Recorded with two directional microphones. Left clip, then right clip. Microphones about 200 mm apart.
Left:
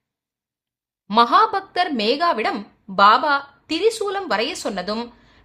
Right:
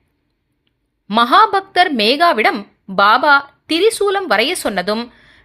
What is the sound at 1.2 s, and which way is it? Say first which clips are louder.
A woman's voice: right 4 dB; 20° right (ahead or behind).